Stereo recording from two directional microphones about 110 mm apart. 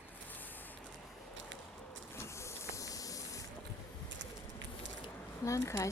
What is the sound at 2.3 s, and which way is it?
Hiss, 25° left (ahead or behind).